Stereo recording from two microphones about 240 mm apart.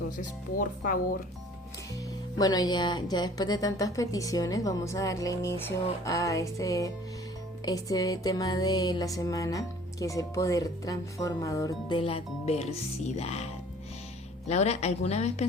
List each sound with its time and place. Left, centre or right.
0.2 s speech: left
2.4 s music: centre
13.1 s speech: left